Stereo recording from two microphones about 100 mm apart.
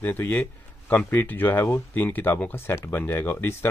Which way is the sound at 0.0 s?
20° left (ahead or behind).